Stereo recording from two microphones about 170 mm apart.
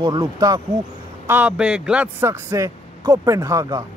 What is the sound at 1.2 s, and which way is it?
Speech, 10° right (ahead or behind).